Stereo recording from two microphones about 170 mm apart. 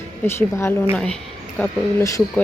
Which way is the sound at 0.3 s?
15° left (ahead or behind).